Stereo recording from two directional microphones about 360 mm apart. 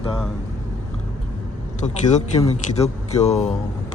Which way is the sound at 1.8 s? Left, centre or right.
Centre.